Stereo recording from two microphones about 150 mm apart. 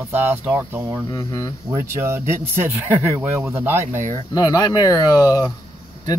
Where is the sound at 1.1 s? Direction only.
20° left (ahead or behind).